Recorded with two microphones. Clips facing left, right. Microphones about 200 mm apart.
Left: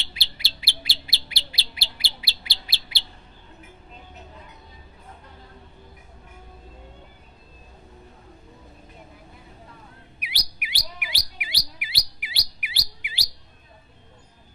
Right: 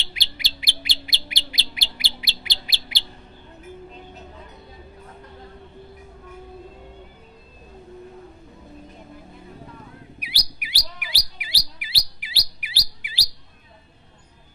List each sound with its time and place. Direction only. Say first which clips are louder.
0.1 s bird: right 3 dB; 15° right (ahead or behind)
10.2 s chirp: right 2 dB; 35° right (ahead or behind)